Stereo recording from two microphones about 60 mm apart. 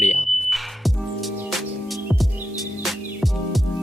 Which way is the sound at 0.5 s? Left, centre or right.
Centre.